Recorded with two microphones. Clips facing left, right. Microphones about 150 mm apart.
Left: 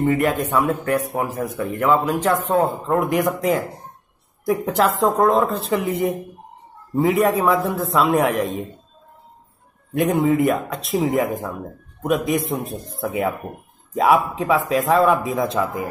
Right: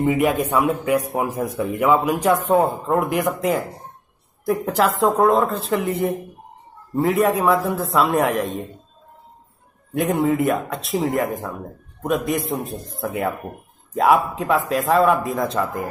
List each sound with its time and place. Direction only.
0.0 s speech: 10° right (ahead or behind)
3.0 s a man's voice: centre (ahead or behind)
9.9 s a man's voice: centre (ahead or behind)